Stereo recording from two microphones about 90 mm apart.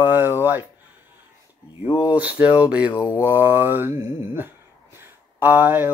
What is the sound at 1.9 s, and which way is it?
Speech, 70° left (ahead or behind).